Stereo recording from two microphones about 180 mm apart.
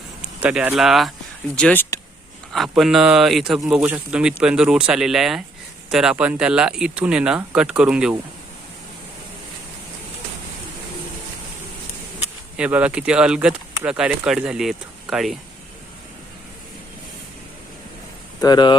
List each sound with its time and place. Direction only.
0.2 s speech: 5° right (ahead or behind); by 2.0 s 10° left (ahead or behind)
2.5 s speech: centre (ahead or behind)
12.5 s speech: 5° right (ahead or behind)
18.3 s speech: 25° left (ahead or behind)